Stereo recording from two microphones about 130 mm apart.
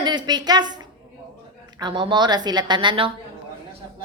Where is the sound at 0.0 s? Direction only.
35° right (ahead or behind).